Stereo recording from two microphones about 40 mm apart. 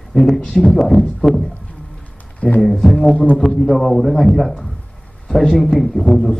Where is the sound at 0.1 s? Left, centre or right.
Centre.